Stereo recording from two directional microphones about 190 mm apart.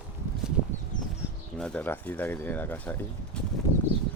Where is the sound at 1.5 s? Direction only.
5° left (ahead or behind).